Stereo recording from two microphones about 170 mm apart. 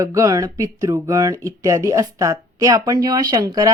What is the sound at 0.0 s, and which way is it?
A woman's voice, 20° right (ahead or behind).